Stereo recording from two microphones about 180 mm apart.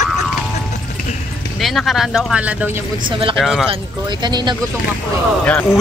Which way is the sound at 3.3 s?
Centre (ahead or behind).